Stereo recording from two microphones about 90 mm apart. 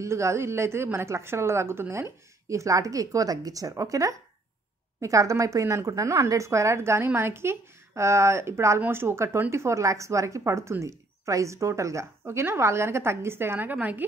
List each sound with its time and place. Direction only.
0.0 s a woman's voice: 35° right (ahead or behind)